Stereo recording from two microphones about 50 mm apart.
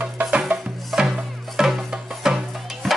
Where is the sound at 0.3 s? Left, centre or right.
Right.